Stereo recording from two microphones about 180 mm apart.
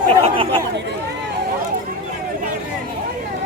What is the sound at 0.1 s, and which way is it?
Speech, 30° right (ahead or behind).